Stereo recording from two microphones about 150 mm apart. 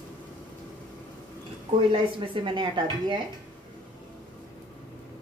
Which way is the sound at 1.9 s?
35° right (ahead or behind).